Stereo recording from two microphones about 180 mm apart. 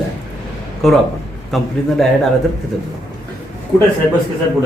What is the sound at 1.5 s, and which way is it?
Speech, centre (ahead or behind).